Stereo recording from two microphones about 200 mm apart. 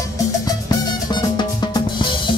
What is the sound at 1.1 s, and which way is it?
Drum, 20° left (ahead or behind).